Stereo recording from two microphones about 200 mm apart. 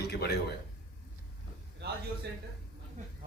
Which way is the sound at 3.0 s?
40° right (ahead or behind).